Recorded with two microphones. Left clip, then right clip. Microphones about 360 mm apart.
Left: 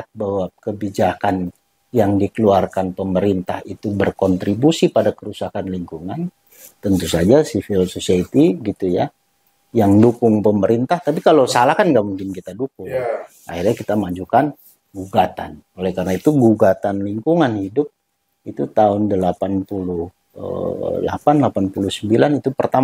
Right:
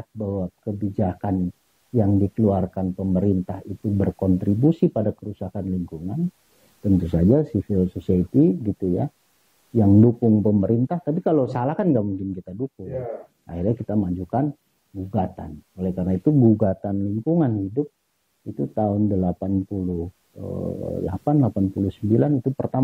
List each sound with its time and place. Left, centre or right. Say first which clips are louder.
0.0 s speech: left 8 dB; centre
9.8 s speech: left 5 dB; centre
16.3 s speech: left 6 dB; centre
19.7 s speech: left 6 dB; centre